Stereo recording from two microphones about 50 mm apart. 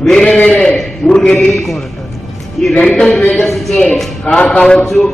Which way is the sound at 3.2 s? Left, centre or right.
Left.